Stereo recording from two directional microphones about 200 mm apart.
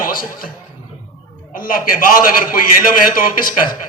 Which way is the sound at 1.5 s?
45° left (ahead or behind).